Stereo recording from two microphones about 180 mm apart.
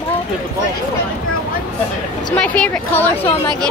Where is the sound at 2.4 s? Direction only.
5° left (ahead or behind).